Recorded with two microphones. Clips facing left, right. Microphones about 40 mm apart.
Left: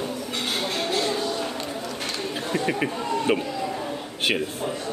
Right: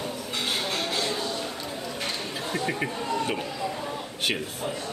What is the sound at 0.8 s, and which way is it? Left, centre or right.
Music, left.